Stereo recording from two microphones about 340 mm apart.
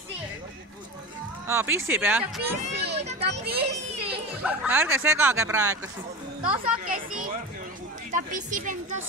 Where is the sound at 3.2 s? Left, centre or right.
Right.